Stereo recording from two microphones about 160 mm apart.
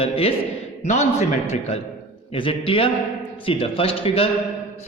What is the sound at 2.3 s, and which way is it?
A man's voice, 35° left (ahead or behind).